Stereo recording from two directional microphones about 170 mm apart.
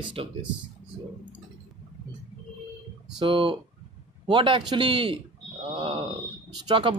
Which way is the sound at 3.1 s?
30° right (ahead or behind).